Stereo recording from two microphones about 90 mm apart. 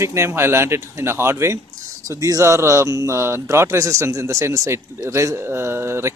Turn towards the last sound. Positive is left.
turn(degrees=-30)  # may be behind; listen again after turning